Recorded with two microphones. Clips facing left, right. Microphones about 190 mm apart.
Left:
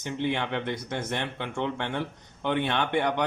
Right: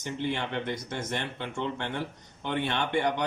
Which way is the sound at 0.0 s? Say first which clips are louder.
Left 3 dB; 60° left (ahead or behind).